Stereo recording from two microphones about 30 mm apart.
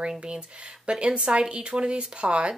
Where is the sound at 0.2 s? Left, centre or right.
Right.